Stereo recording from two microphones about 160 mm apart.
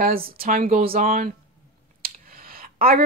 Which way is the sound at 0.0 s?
65° right (ahead or behind).